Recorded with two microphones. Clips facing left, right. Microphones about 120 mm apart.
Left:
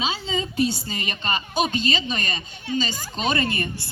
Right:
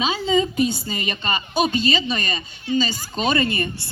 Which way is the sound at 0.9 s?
40° left (ahead or behind).